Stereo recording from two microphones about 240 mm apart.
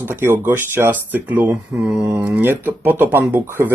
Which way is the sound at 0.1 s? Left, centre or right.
Centre.